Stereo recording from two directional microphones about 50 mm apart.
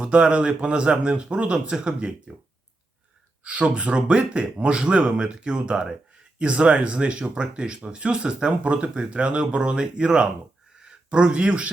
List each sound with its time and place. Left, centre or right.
0.0 s speech: right
3.4 s speech: right